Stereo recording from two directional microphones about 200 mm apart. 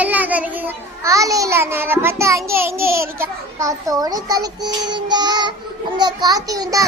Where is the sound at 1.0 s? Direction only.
15° right (ahead or behind).